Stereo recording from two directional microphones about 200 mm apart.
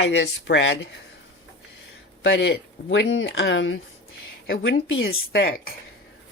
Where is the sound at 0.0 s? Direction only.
60° left (ahead or behind).